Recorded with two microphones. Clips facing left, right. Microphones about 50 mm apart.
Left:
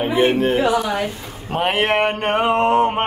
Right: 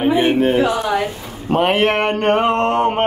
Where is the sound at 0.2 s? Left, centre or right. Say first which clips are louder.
Right 1 dB; centre.